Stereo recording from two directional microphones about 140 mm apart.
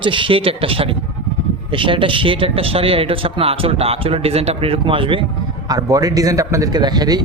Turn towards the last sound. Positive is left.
turn(degrees=-30)  # may be behind; listen again after turning